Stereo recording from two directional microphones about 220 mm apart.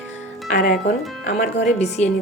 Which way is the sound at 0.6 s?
45° left (ahead or behind).